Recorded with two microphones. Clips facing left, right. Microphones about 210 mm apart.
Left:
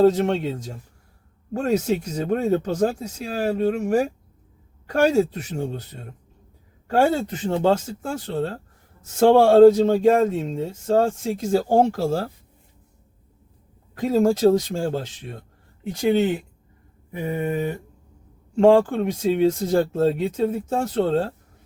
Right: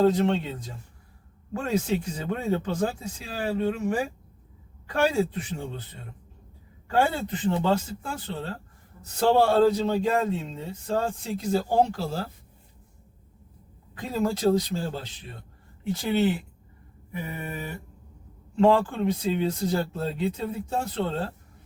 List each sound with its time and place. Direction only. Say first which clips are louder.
0.0 s speech: left 4 dB; 45° left (ahead or behind)
6.8 s speech: left 5 dB; 45° left (ahead or behind)
14.1 s speech: left 6 dB; 45° left (ahead or behind)
17.3 s mantra: left 11 dB; 30° left (ahead or behind)
18.5 s speech: left 6 dB; 45° left (ahead or behind)